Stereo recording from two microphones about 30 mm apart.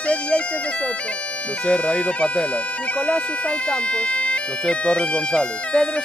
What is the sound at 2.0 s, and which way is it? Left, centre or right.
Speech, left.